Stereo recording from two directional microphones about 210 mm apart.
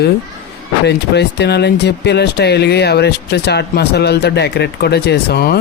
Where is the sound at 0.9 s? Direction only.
55° left (ahead or behind).